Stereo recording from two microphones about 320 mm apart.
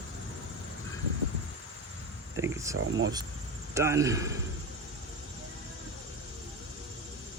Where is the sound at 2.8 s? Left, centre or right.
Right.